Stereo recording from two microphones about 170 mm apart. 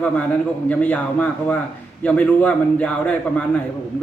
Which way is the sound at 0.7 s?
10° left (ahead or behind).